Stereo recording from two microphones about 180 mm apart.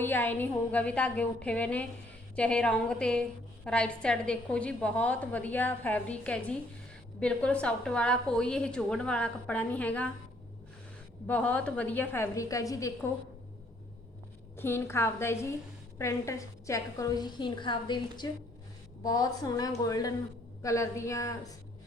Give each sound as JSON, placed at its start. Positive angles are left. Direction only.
{"t": 0.0, "sound": "a woman's voice", "side_deg": 10}
{"t": 11.3, "sound": "a woman's voice", "side_deg": 5}
{"t": 14.5, "sound": "a woman's voice", "side_deg": 15}